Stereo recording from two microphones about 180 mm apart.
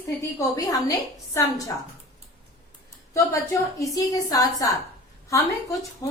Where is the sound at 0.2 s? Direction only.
20° left (ahead or behind).